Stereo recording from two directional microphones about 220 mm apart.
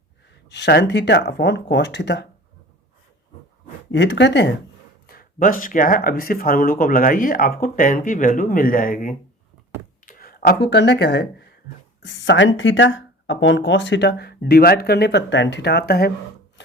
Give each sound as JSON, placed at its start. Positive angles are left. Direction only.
{"t": 0.5, "sound": "speech", "side_deg": 50}
{"t": 3.9, "sound": "speech", "side_deg": 55}
{"t": 5.0, "sound": "speech", "side_deg": 40}
{"t": 16.6, "sound": "wood", "side_deg": 55}